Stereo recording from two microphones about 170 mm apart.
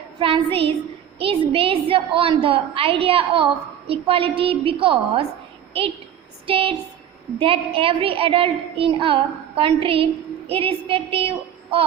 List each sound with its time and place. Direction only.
0.2 s a woman's voice: 30° right (ahead or behind)
6.4 s a woman's voice: 35° right (ahead or behind)